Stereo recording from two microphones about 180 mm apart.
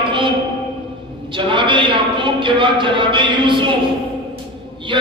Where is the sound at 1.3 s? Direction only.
25° right (ahead or behind).